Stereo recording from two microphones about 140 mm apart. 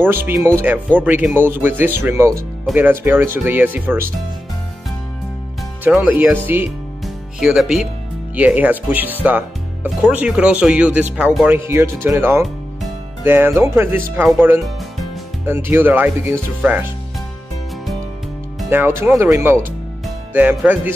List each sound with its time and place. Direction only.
0.0 s speech: 15° right (ahead or behind)
5.9 s speech: 10° right (ahead or behind)
18.7 s speech: 15° right (ahead or behind)